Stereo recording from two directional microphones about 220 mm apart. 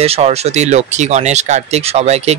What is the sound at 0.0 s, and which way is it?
Speech, 30° right (ahead or behind).